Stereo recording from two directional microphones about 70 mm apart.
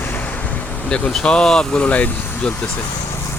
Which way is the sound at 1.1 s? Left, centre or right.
Centre.